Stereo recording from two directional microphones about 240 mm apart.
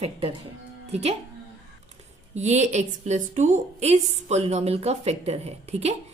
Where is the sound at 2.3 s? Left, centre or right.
Right.